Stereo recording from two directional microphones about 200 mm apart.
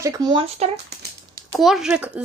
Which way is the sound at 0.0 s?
20° right (ahead or behind).